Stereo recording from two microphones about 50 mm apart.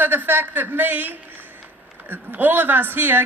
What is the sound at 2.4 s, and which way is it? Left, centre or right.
Speech, right.